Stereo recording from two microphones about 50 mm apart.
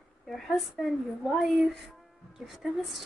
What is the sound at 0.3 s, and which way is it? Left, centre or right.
A woman's voice, centre.